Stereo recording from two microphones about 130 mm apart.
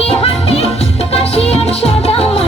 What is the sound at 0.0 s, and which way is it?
Music, 45° left (ahead or behind).